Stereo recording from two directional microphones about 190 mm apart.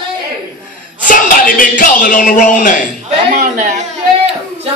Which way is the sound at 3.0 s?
40° right (ahead or behind).